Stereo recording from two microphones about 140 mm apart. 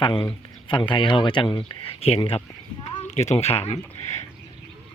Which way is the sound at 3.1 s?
50° left (ahead or behind).